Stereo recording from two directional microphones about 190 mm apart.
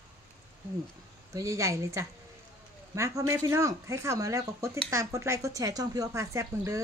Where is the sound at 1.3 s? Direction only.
15° right (ahead or behind).